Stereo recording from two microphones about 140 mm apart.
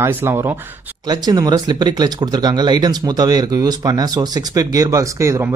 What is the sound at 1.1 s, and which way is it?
Speech, 30° right (ahead or behind).